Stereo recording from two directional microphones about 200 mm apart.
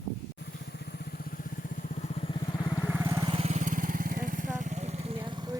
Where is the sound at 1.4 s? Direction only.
45° left (ahead or behind).